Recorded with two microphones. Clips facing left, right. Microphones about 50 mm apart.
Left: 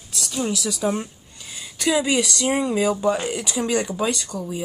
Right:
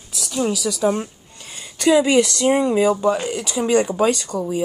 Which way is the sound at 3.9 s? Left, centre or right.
Right.